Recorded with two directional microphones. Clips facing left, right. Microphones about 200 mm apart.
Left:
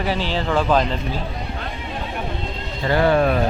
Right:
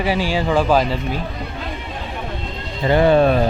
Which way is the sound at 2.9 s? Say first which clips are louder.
Right 4 dB; 20° right (ahead or behind).